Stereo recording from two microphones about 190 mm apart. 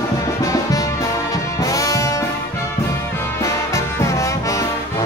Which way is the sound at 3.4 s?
15° left (ahead or behind).